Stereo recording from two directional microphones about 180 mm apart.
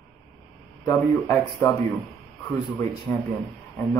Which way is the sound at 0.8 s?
15° left (ahead or behind).